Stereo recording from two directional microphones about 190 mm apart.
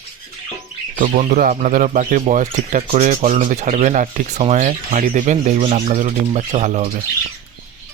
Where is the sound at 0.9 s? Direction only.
40° right (ahead or behind).